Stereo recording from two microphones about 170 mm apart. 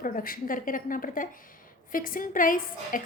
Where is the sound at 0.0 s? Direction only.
55° left (ahead or behind).